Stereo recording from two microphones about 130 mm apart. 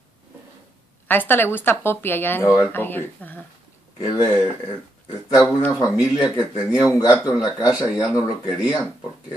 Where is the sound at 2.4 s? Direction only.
10° right (ahead or behind).